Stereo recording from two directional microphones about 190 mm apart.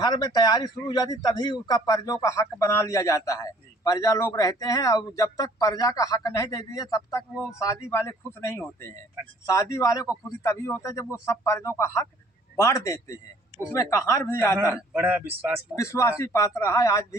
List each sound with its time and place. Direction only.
0.0 s a man's voice: 20° left (ahead or behind)
14.8 s speech: 10° right (ahead or behind)
15.7 s a man's voice: 15° left (ahead or behind)